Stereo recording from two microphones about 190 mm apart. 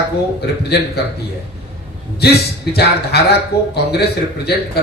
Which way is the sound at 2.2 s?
60° left (ahead or behind).